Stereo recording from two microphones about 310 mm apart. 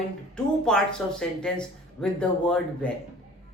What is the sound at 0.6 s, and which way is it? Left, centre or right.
Speech, centre.